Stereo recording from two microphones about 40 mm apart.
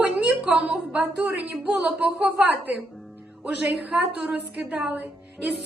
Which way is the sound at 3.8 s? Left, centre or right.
Right.